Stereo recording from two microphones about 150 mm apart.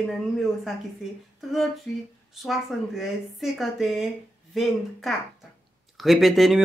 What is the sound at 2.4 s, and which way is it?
Speech, centre (ahead or behind).